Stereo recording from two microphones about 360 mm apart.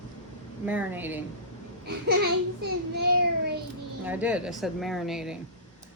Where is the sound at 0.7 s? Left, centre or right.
Centre.